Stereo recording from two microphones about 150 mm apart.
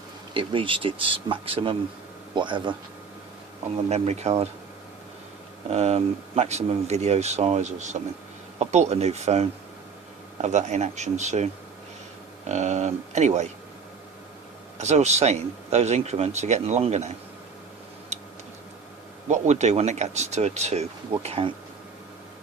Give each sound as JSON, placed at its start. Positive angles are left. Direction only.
{"t": 0.3, "sound": "speech", "side_deg": -35}
{"t": 3.8, "sound": "speech", "side_deg": -45}
{"t": 5.7, "sound": "speech", "side_deg": -45}
{"t": 12.5, "sound": "speech", "side_deg": -50}
{"t": 14.8, "sound": "speech", "side_deg": -50}
{"t": 18.1, "sound": "tick-tock", "side_deg": -50}
{"t": 19.3, "sound": "speech", "side_deg": -50}